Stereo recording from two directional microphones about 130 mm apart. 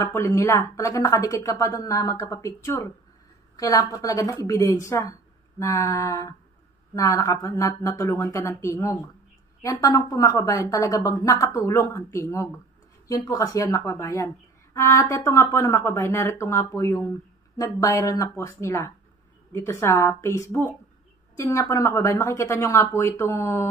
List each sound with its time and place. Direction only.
0.0 s speech: 20° left (ahead or behind)